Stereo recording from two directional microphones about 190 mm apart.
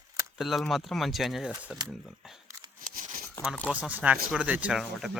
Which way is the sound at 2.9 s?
45° right (ahead or behind).